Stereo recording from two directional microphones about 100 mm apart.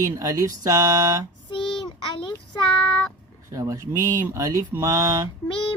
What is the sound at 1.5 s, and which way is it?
Child singing, 50° left (ahead or behind).